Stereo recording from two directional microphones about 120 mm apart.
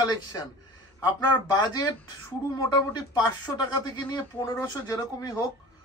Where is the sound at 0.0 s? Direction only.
35° left (ahead or behind).